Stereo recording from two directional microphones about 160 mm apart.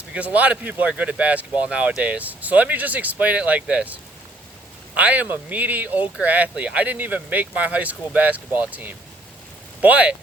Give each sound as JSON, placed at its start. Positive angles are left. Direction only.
{"t": 0.1, "sound": "speech", "side_deg": -10}
{"t": 4.9, "sound": "speech", "side_deg": -10}